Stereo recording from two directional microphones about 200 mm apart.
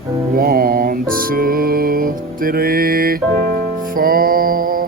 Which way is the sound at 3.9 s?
45° right (ahead or behind).